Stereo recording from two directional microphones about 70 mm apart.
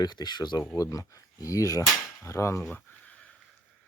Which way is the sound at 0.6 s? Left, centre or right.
Left.